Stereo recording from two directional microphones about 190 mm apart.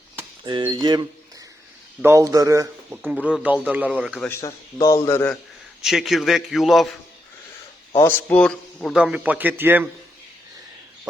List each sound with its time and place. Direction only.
0.4 s speech: 25° right (ahead or behind)
3.0 s speech: 5° right (ahead or behind)
4.3 s a man's voice: 15° left (ahead or behind)
5.8 s speech: centre (ahead or behind)
7.9 s speech: 10° left (ahead or behind); by 9.9 s 10° right (ahead or behind)